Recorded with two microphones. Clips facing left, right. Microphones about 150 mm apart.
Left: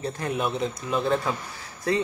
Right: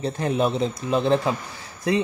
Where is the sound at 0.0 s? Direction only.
25° right (ahead or behind).